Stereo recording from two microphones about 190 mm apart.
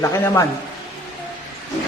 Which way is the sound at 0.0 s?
15° left (ahead or behind).